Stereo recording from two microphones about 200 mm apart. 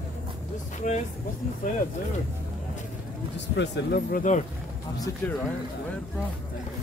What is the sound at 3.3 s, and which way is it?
Speech, 60° left (ahead or behind).